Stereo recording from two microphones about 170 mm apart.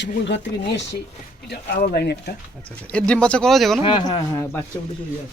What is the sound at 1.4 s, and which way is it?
Speech, 65° left (ahead or behind).